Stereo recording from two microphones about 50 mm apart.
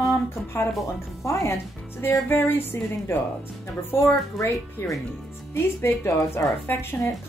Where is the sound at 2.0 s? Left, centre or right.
Left.